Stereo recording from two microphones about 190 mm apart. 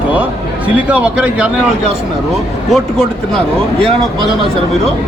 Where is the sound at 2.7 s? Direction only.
Centre (ahead or behind).